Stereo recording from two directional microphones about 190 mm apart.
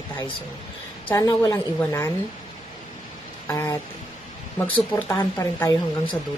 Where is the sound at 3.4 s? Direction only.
15° left (ahead or behind).